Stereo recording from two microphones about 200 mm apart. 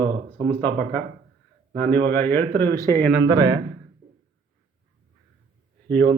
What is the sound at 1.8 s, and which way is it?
Speech, 10° left (ahead or behind).